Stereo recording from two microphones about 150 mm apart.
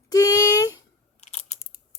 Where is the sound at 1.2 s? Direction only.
45° left (ahead or behind).